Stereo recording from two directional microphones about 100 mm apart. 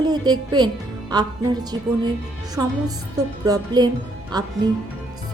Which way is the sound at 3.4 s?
40° right (ahead or behind).